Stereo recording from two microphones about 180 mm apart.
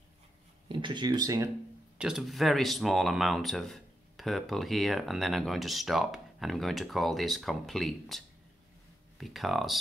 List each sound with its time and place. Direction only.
0.7 s speech: 25° right (ahead or behind)
2.0 s speech: 5° right (ahead or behind)
9.2 s speech: centre (ahead or behind)